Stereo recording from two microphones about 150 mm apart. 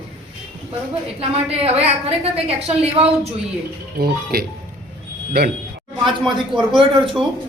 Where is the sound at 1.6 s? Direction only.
40° right (ahead or behind).